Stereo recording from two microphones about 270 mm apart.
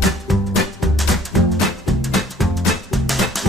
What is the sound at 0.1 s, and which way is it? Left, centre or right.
Music, centre.